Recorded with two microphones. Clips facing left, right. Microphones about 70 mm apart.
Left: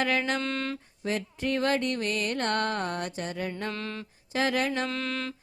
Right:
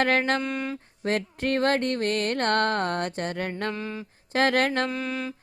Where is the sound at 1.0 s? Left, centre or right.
Right.